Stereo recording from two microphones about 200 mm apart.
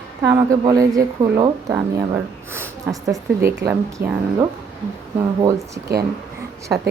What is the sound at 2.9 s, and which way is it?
Speech, 15° right (ahead or behind).